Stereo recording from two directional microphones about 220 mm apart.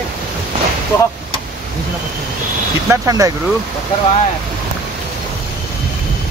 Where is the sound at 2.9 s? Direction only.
15° right (ahead or behind).